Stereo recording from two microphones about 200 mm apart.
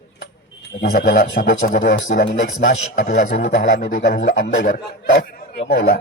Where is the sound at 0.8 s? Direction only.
50° left (ahead or behind).